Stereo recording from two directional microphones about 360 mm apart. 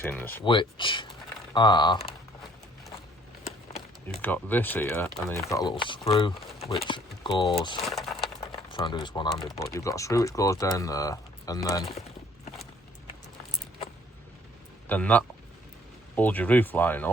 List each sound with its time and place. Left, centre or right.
0.0 s speech: centre
3.7 s run: centre
4.2 s speech: centre
7.9 s a sound: centre
8.5 s speech: centre
14.8 s speech: centre